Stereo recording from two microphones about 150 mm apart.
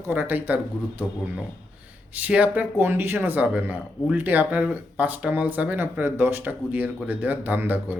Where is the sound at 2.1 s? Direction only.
10° right (ahead or behind).